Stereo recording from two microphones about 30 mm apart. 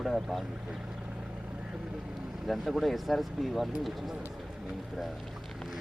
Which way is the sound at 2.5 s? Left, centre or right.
Centre.